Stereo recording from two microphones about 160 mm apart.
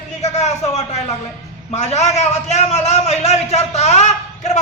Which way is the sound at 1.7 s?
45° left (ahead or behind).